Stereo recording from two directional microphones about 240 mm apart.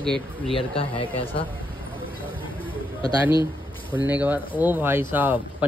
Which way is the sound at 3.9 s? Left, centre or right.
Centre.